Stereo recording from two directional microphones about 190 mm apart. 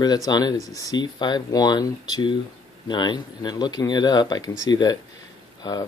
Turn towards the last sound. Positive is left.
turn(degrees=20)  # may be behind; listen again after turning